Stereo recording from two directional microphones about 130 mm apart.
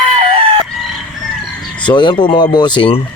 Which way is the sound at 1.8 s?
35° left (ahead or behind).